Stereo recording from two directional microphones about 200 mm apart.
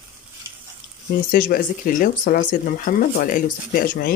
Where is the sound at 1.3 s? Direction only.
45° left (ahead or behind).